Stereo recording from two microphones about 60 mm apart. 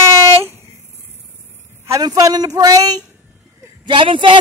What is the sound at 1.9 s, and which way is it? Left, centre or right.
Speech, right.